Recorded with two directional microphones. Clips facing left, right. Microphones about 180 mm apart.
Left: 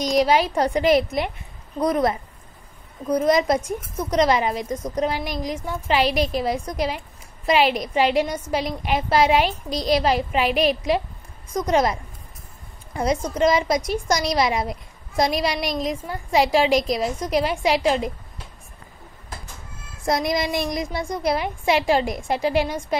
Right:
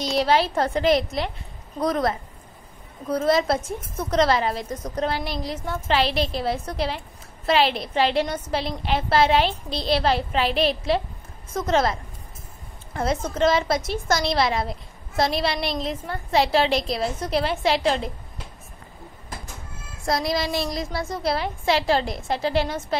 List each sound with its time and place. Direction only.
0.0 s a woman's voice: 10° left (ahead or behind)
3.1 s a woman's voice: 15° left (ahead or behind)
6.0 s a woman's voice: 45° left (ahead or behind)
6.4 s a woman's voice: 10° left (ahead or behind)
20.1 s a woman's voice: 20° left (ahead or behind)